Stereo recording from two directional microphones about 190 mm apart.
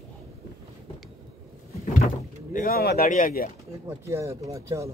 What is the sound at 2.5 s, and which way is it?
Speech, 50° left (ahead or behind).